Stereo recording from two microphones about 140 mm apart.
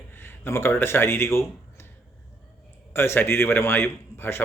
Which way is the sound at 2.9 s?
15° left (ahead or behind).